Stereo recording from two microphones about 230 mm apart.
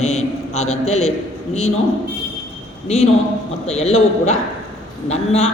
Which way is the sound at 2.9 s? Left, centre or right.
Left.